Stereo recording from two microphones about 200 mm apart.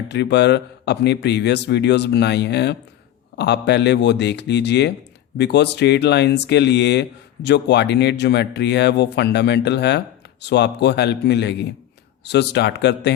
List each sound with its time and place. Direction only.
0.1 s speech: 60° left (ahead or behind)